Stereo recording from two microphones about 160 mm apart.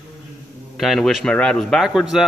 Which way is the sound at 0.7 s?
Centre (ahead or behind).